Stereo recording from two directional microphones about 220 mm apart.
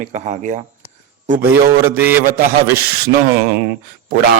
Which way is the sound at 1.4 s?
10° right (ahead or behind).